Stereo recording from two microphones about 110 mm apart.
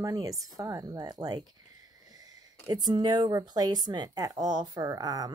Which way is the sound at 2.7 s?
40° right (ahead or behind).